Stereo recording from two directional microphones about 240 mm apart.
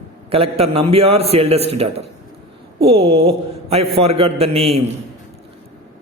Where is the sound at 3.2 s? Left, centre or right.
Right.